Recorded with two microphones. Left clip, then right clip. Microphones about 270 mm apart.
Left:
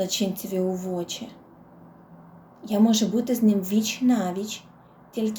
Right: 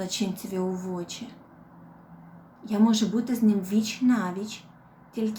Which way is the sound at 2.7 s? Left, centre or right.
Centre.